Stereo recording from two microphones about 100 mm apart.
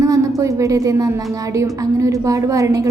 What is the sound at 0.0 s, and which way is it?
A woman's voice, 30° right (ahead or behind).